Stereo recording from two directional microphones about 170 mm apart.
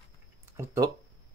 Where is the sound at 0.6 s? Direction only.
15° right (ahead or behind).